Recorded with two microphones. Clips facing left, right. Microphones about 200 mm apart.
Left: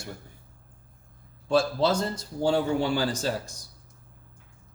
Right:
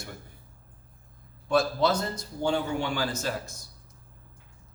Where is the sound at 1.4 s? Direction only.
30° left (ahead or behind).